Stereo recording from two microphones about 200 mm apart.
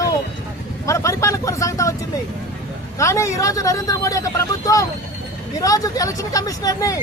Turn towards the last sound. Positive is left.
turn(degrees=15)  # may be behind; listen again after turning